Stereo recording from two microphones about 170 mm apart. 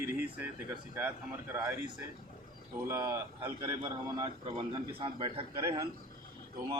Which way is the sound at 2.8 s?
15° right (ahead or behind).